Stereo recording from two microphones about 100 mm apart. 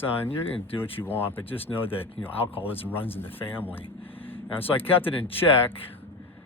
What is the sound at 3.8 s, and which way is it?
Speech, 65° left (ahead or behind).